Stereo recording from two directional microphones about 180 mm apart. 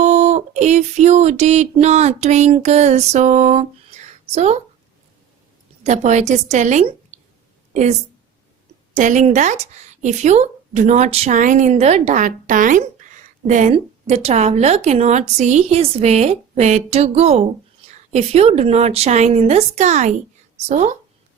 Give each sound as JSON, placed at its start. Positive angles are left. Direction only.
{"t": 0.0, "sound": "a sound", "side_deg": -40}
{"t": 5.8, "sound": "a woman's voice", "side_deg": -40}
{"t": 9.0, "sound": "a woman's voice", "side_deg": -45}